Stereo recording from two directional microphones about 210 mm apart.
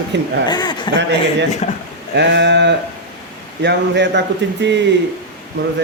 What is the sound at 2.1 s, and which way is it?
A man's voice, 55° right (ahead or behind).